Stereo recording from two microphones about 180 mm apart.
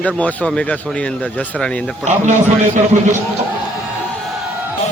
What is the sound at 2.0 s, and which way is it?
Speech, 40° right (ahead or behind).